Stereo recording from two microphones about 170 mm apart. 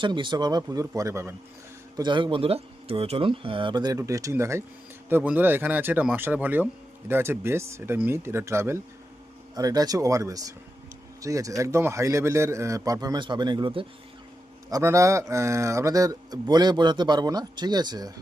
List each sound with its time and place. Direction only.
0.0 s speech: 25° right (ahead or behind)
2.0 s speech: 25° right (ahead or behind)
14.7 s speech: 15° right (ahead or behind)